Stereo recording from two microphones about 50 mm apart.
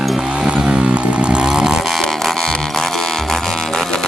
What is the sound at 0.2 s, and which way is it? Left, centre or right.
Chainsaw, centre.